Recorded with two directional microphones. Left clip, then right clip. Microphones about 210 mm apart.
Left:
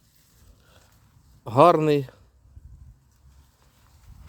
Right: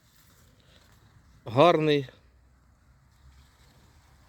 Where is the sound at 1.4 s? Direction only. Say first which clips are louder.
Left 4 dB; 10° left (ahead or behind).